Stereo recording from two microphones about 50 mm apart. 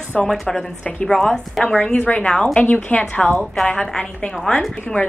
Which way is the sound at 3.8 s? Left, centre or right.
Centre.